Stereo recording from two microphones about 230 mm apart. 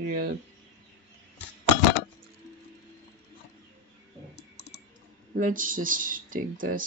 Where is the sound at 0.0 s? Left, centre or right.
Right.